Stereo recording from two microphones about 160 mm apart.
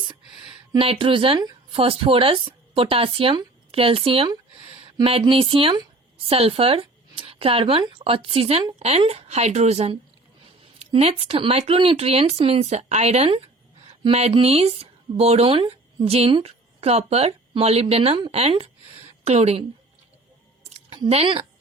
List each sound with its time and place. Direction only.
0.7 s a woman's voice: 35° right (ahead or behind)
20.7 s speech: 40° right (ahead or behind)